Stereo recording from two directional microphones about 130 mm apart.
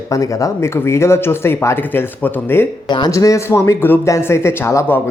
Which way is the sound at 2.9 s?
35° left (ahead or behind).